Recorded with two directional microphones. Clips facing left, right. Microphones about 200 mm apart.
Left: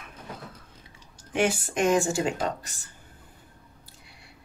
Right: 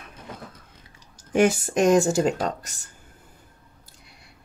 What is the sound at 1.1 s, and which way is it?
Speech, 45° right (ahead or behind).